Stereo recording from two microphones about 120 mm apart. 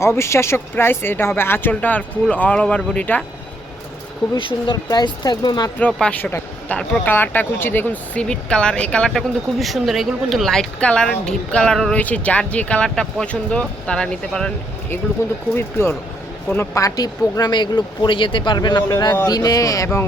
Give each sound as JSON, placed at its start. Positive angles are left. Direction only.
{"t": 0.0, "sound": "speech", "side_deg": 20}
{"t": 4.4, "sound": "speech", "side_deg": 45}
{"t": 5.8, "sound": "speech", "side_deg": 10}
{"t": 15.2, "sound": "speech", "side_deg": 25}
{"t": 16.7, "sound": "speech", "side_deg": 30}